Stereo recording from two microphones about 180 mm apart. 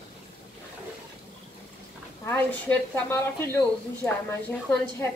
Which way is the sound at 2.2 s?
10° left (ahead or behind).